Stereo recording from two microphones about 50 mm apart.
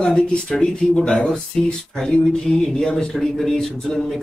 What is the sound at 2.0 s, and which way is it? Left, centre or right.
A man's voice, centre.